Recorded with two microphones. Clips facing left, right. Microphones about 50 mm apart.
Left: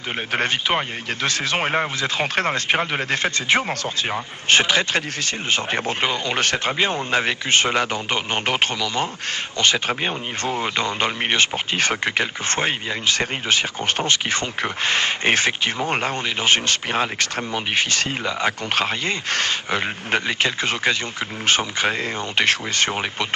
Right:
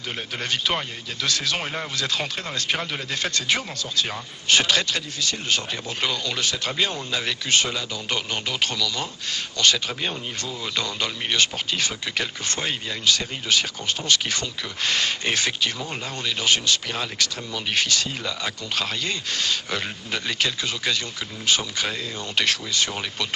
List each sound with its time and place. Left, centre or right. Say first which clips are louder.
0.3 s speech: left 5 dB; left
2.0 s speech: left 3 dB; left
2.2 s speech: left 9 dB; left
2.6 s speech: left 6 dB; left
6.3 s speech: left 6 dB; left
6.7 s speech: left 5 dB; left
11.8 s speech: left 9 dB; left
15.9 s speech: left 9 dB; left
16.2 s speech: right 1 dB; left
20.2 s speech: left 4 dB; left